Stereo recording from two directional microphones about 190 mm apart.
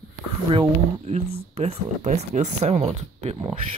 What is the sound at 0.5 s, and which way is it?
Speech, 30° right (ahead or behind).